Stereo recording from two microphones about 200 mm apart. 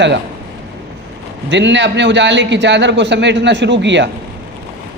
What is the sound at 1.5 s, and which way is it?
A man's voice, 60° right (ahead or behind).